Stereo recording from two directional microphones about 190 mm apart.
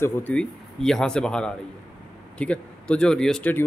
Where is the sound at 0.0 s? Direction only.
10° left (ahead or behind).